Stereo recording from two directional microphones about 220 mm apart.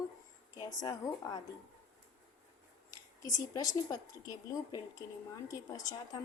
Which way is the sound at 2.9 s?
15° left (ahead or behind).